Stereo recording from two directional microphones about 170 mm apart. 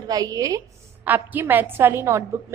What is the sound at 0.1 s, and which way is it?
A woman's voice, 20° right (ahead or behind).